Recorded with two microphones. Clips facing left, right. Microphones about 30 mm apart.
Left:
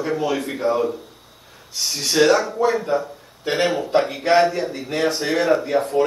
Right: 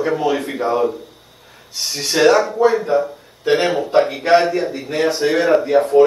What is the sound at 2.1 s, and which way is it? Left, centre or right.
Speech, right.